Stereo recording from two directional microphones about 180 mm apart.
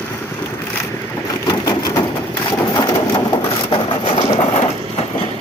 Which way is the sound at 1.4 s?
20° left (ahead or behind).